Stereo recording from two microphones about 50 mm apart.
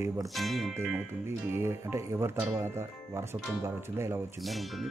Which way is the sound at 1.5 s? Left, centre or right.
Right.